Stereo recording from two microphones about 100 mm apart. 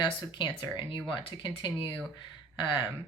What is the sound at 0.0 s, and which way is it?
Speech, 45° left (ahead or behind).